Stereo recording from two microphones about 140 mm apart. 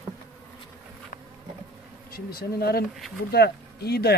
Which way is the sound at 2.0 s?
90° left.